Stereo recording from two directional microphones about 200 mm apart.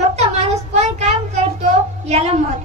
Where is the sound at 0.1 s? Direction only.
35° right (ahead or behind).